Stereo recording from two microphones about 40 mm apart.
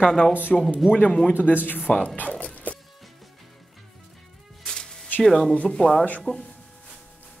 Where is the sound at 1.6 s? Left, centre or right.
Left.